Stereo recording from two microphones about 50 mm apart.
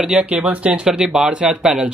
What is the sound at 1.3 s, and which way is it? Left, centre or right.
Speech, right.